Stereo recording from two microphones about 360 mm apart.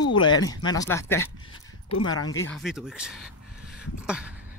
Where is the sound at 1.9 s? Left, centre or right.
Left.